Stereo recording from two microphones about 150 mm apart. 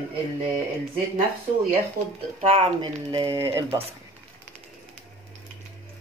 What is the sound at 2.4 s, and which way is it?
Speech, 40° right (ahead or behind).